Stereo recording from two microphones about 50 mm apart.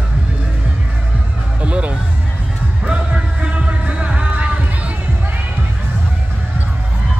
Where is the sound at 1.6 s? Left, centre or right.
Right.